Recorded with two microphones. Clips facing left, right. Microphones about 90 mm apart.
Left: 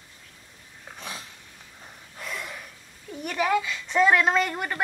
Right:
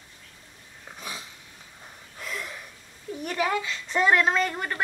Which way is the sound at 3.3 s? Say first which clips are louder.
Left 3 dB; 5° left (ahead or behind).